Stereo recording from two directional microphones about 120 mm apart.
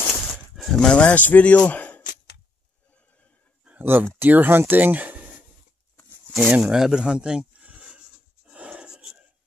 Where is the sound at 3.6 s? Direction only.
15° right (ahead or behind).